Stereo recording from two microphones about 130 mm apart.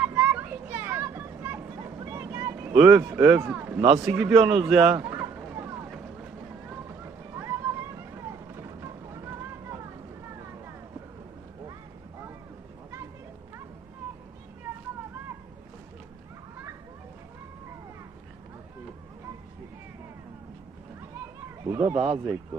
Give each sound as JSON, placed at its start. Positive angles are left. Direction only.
{"t": 0.0, "sound": "children playing", "side_deg": -10}
{"t": 2.0, "sound": "vehicle", "side_deg": -20}
{"t": 2.7, "sound": "a man's voice", "side_deg": -15}
{"t": 5.0, "sound": "a sound", "side_deg": -15}
{"t": 6.7, "sound": "vehicle", "side_deg": -20}
{"t": 21.6, "sound": "a sound", "side_deg": -20}
{"t": 21.9, "sound": "speech", "side_deg": -50}